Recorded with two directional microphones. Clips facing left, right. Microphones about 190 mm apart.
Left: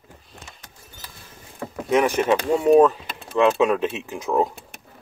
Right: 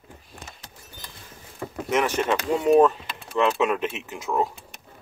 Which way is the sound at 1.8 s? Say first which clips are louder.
Left 4 dB; 15° left (ahead or behind).